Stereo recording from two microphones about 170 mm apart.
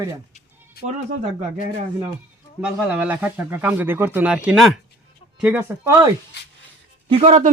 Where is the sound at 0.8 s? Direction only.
65° left (ahead or behind).